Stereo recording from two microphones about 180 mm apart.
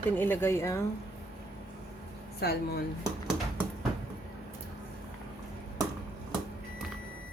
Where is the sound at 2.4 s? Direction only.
60° left (ahead or behind).